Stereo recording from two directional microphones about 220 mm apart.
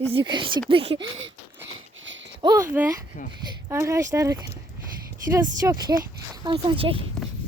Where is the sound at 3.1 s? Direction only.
40° left (ahead or behind).